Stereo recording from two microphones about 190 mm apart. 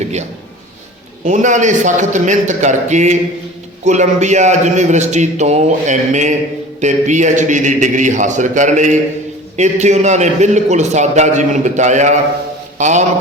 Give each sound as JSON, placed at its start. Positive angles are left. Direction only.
{"t": 1.2, "sound": "a man's voice", "side_deg": -40}